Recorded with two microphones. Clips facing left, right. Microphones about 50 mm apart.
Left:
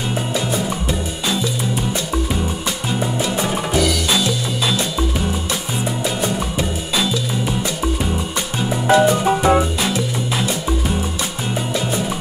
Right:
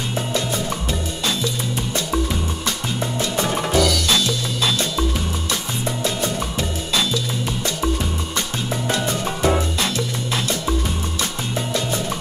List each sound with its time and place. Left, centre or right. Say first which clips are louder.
0.3 s music: left 2 dB; centre
2.9 s music: left 6 dB; centre
8.9 s music: left 13 dB; centre